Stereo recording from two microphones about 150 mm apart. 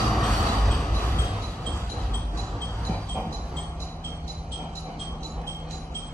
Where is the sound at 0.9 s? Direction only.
15° left (ahead or behind).